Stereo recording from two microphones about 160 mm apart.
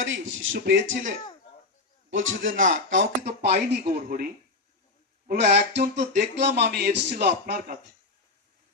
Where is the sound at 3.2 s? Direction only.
45° right (ahead or behind).